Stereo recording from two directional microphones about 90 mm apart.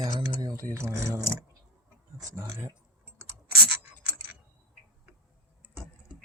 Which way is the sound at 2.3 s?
25° right (ahead or behind).